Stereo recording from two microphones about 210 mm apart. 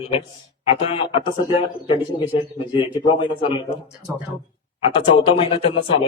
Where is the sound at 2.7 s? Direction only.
25° left (ahead or behind).